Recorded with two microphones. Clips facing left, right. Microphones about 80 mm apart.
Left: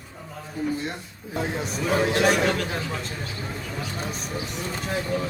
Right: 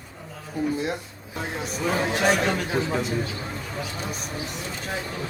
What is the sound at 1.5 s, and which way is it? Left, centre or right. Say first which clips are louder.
A man's voice: left 1 dB; centre.